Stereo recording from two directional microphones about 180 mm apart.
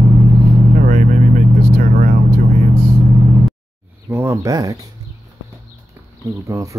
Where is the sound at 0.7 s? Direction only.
45° right (ahead or behind).